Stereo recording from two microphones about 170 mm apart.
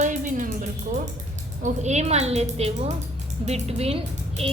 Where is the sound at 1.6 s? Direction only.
40° right (ahead or behind).